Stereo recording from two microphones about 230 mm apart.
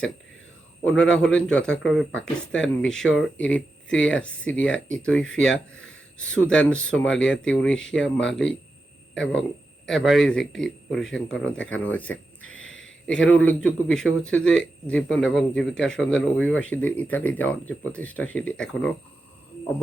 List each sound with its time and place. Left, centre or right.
0.9 s a man's voice: centre
12.4 s a sound: left
13.1 s a man's voice: centre